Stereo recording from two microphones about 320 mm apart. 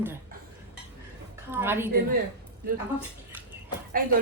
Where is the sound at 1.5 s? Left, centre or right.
Centre.